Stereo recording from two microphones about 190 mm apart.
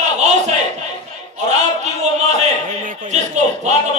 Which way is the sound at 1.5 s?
35° right (ahead or behind).